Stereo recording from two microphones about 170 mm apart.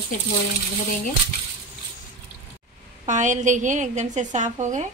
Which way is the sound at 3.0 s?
45° right (ahead or behind).